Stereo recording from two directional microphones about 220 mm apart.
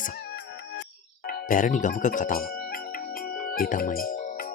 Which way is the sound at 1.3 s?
40° left (ahead or behind).